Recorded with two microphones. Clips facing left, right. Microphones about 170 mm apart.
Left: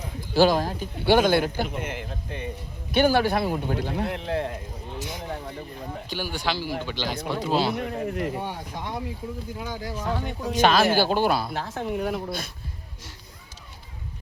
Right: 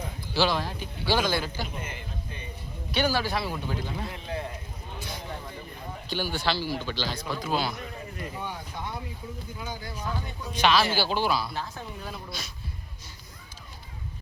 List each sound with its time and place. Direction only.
0.2 s a man's voice: 45° left (ahead or behind); by 2.5 s 90° left
2.9 s a man's voice: 55° left (ahead or behind); by 4.5 s 75° left (ahead or behind)
6.1 s speech: 15° left (ahead or behind)
7.2 s speech: 65° left (ahead or behind)
7.4 s speech: 30° left (ahead or behind)
7.8 s speech: 65° left (ahead or behind)
9.6 s speech: 80° left
10.5 s speech: 45° left (ahead or behind)